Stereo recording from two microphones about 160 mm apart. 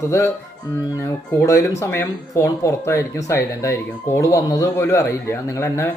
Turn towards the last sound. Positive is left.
turn(degrees=20)  # may be behind; listen again after turning